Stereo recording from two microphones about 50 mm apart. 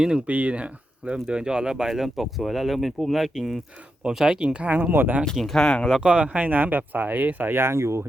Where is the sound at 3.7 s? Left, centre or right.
Right.